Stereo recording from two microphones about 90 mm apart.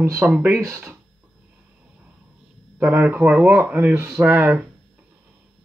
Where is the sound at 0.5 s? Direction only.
30° right (ahead or behind).